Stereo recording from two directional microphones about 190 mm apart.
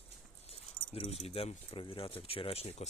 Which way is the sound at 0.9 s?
30° left (ahead or behind).